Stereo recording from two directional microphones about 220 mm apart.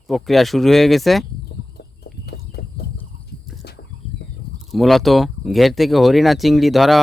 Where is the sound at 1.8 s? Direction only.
50° left (ahead or behind).